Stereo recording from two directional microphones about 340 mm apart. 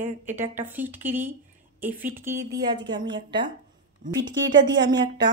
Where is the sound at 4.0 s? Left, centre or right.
Right.